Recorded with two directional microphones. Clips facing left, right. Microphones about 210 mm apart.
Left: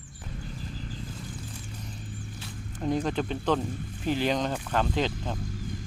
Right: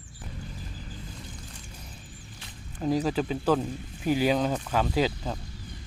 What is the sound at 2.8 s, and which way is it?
Speech, 5° right (ahead or behind).